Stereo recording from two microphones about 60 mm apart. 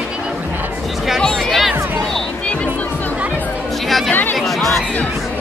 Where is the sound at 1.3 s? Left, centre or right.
Centre.